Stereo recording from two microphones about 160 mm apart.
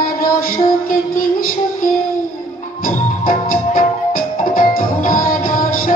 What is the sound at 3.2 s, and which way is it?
Music, 60° left (ahead or behind).